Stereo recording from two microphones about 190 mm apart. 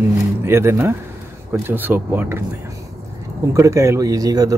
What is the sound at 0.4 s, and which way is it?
Speech, 15° right (ahead or behind).